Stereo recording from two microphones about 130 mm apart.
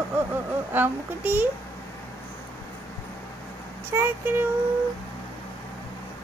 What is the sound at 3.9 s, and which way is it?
Speech, 15° right (ahead or behind).